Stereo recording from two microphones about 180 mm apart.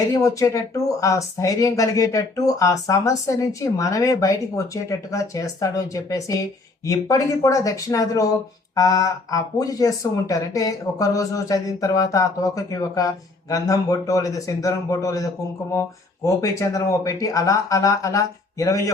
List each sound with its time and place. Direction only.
0.1 s speech: 20° left (ahead or behind)